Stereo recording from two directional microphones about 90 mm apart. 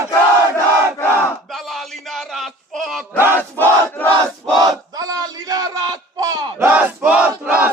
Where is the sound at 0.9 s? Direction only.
25° left (ahead or behind).